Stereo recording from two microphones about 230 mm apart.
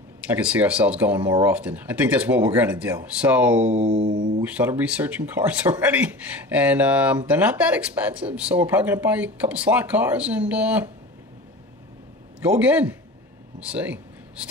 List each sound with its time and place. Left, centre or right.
0.2 s speech: centre
3.9 s mantra: right
4.4 s speech: centre
12.4 s speech: centre
13.6 s a sound: centre